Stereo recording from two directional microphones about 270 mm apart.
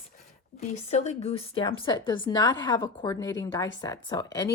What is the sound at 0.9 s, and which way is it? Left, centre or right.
A woman's voice, left.